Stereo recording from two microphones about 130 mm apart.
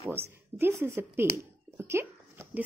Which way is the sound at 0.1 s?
15° right (ahead or behind).